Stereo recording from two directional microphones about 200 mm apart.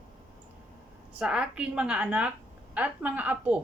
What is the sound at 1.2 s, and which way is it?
Speech, 5° right (ahead or behind).